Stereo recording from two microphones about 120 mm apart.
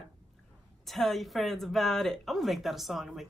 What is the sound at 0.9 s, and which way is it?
Speech, centre (ahead or behind).